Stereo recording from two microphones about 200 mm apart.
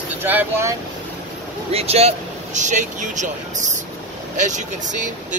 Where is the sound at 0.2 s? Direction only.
10° right (ahead or behind).